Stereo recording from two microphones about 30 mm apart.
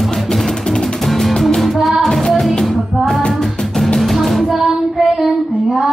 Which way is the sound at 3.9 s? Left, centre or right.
Centre.